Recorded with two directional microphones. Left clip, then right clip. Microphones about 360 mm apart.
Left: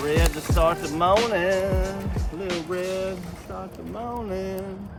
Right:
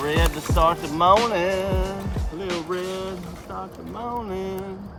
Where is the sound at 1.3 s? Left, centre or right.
Centre.